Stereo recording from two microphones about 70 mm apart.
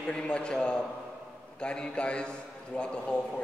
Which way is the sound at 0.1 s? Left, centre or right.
Centre.